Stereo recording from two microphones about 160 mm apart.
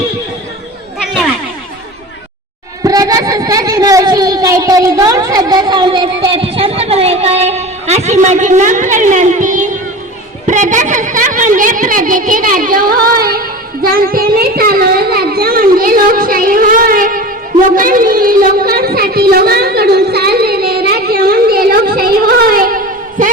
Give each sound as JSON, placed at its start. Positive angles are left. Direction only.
{"t": 2.8, "sound": "a woman's voice", "side_deg": -25}